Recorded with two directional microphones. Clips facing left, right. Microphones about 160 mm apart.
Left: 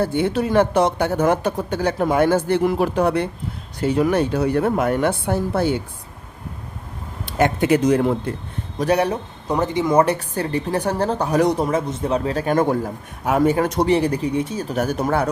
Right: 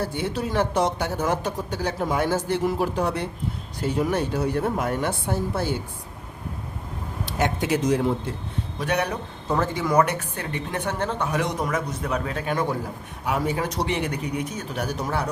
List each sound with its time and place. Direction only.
0.0 s speech: 60° left (ahead or behind)
3.8 s a woman's voice: 75° left (ahead or behind)
7.3 s speech: 55° left (ahead or behind)
8.8 s a woman's voice: 35° left (ahead or behind)
9.5 s a woman's voice: 20° left (ahead or behind); by 13.8 s 50° left (ahead or behind)
13.8 s a woman's voice: 35° left (ahead or behind); by 15.3 s 55° left (ahead or behind)